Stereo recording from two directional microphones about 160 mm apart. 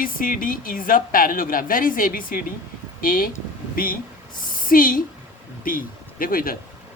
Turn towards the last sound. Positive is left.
turn(degrees=65)  # may be behind; listen again after turning